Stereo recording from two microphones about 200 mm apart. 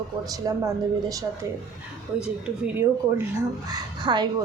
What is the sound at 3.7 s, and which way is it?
Speech, 20° right (ahead or behind).